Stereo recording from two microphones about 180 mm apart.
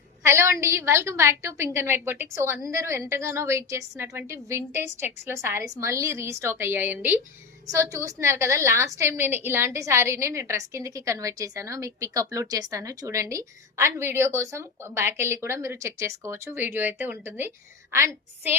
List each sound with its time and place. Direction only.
0.3 s a woman's voice: 15° right (ahead or behind)